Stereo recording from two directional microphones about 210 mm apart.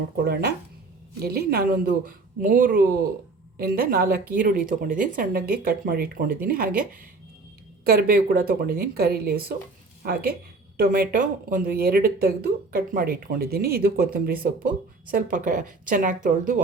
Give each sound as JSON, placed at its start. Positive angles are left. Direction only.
{"t": 1.2, "sound": "a woman's voice", "side_deg": -45}